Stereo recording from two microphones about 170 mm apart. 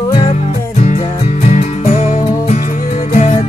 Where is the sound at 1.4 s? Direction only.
40° left (ahead or behind).